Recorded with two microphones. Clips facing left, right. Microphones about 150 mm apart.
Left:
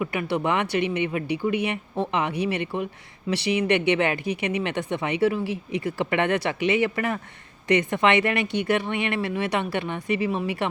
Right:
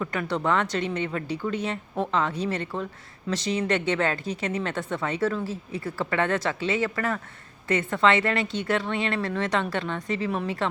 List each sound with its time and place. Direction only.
0.0 s speech: 10° left (ahead or behind)